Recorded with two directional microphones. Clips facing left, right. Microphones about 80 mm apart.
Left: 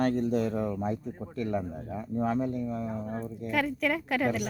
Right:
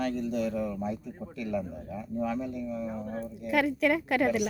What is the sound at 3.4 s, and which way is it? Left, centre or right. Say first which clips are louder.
A woman's voice: right 3 dB; centre.